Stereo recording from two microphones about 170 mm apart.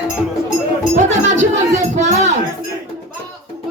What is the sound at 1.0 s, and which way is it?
Music, 45° right (ahead or behind).